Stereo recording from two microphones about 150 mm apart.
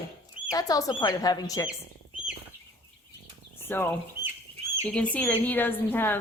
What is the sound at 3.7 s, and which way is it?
Speech, 15° left (ahead or behind).